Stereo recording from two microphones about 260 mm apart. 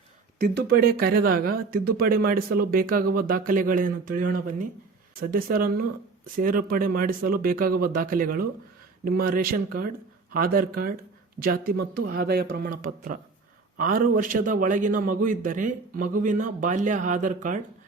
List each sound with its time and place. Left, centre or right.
0.3 s speech: right